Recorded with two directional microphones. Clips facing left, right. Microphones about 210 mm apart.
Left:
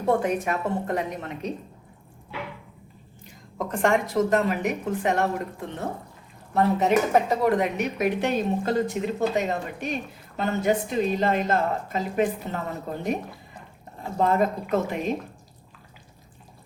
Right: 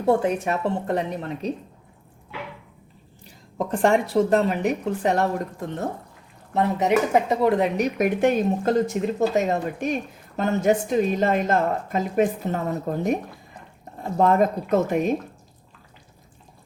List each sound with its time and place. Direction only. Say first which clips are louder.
0.1 s speech: right 3 dB; 30° right (ahead or behind)
3.2 s speech: right 4 dB; 35° right (ahead or behind)
6.5 s speech: even; 20° right (ahead or behind)
7.8 s speech: right 4 dB; 50° right (ahead or behind)
14.2 s speech: right 3 dB; 45° right (ahead or behind)